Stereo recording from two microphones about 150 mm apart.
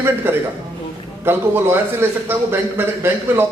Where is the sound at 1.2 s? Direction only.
15° right (ahead or behind).